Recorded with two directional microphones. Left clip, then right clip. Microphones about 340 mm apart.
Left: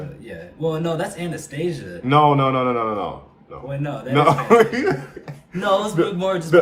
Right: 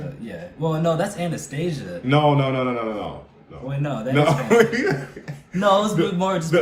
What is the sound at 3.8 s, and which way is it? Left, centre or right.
Speech, centre.